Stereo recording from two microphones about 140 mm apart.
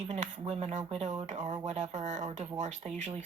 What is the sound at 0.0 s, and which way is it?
Speech, 55° right (ahead or behind).